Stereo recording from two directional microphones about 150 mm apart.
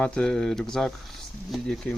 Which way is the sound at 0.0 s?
5° left (ahead or behind).